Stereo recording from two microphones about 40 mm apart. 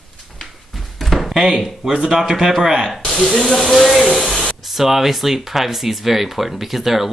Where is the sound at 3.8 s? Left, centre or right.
Centre.